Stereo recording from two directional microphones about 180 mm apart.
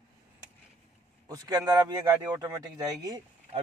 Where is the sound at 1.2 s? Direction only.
20° right (ahead or behind).